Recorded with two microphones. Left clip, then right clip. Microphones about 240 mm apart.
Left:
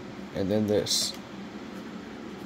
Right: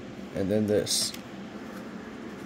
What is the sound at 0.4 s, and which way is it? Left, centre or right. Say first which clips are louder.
Speech: even; centre.